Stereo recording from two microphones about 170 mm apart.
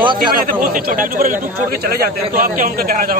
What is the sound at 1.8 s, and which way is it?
A man's voice, 65° right (ahead or behind).